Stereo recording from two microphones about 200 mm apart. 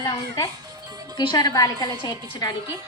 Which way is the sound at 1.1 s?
20° left (ahead or behind).